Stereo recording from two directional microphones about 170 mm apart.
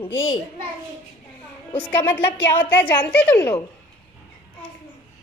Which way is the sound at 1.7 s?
10° left (ahead or behind).